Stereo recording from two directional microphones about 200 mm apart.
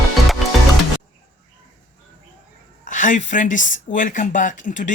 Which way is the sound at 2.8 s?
40° left (ahead or behind).